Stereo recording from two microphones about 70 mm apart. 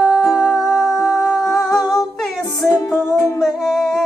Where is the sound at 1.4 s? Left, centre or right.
Centre.